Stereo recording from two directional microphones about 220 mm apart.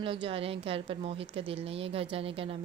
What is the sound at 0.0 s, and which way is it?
Speech, 25° right (ahead or behind).